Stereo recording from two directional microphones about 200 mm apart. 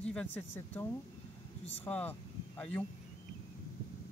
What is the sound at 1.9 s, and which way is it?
Speech, 10° left (ahead or behind).